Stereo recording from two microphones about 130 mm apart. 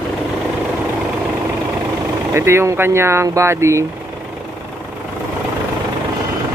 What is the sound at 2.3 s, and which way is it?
Speech, 20° right (ahead or behind).